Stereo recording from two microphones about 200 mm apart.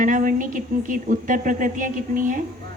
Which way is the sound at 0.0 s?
40° right (ahead or behind).